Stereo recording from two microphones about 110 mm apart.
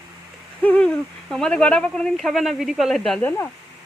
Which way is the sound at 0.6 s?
10° left (ahead or behind).